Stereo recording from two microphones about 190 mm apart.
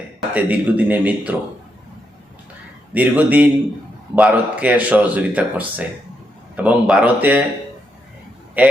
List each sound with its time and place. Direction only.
0.3 s speech: 10° right (ahead or behind)
2.9 s speech: 10° right (ahead or behind)
8.6 s a man's voice: 10° right (ahead or behind)